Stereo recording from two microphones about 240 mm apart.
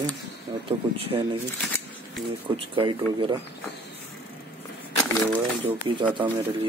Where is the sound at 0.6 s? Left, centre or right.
Right.